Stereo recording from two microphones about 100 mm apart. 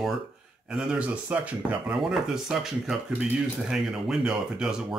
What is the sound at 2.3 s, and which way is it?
Speech, 5° right (ahead or behind).